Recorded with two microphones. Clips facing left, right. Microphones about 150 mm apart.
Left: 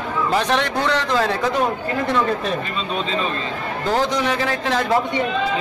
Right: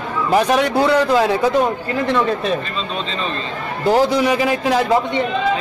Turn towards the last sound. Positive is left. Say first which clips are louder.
# right 5 dB
turn(degrees=-10)  # may be behind; listen again after turning